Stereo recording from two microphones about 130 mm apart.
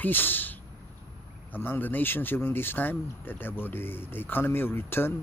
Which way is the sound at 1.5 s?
15° left (ahead or behind).